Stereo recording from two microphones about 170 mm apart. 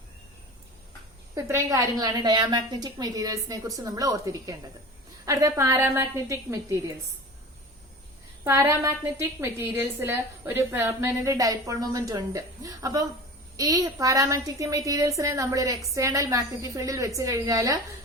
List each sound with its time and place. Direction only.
1.4 s a woman's voice: 20° right (ahead or behind)
8.4 s a woman's voice: 15° right (ahead or behind)